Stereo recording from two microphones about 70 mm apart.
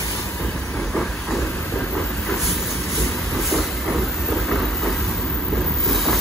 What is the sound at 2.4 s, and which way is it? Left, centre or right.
Vehicle, centre.